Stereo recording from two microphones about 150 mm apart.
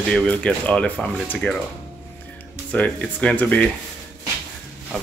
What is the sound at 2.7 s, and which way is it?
Speech, 10° left (ahead or behind).